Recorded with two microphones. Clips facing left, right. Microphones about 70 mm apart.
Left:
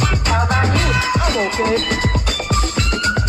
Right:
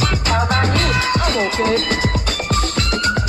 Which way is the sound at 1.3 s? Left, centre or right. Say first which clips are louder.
Even; centre.